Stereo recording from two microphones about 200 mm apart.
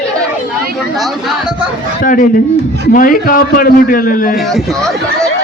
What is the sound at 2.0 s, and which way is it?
A man's voice, 45° left (ahead or behind).